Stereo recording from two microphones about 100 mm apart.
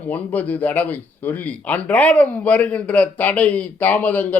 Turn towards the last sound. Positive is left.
turn(degrees=15)  # may be behind; listen again after turning